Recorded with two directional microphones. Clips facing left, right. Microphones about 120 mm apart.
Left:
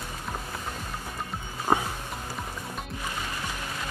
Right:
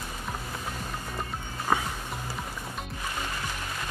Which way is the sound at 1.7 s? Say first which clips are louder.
Left 2 dB; 25° left (ahead or behind).